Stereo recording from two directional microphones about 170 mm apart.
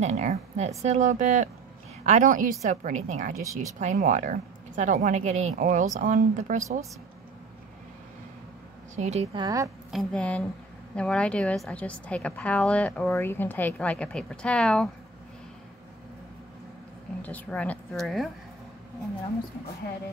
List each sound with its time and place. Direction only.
0.0 s a woman's voice: 40° right (ahead or behind)
8.9 s a woman's voice: 40° right (ahead or behind)
9.4 s a woman's voice: 20° right (ahead or behind)
9.8 s a woman's voice: centre (ahead or behind)
17.2 s a woman's voice: 10° left (ahead or behind)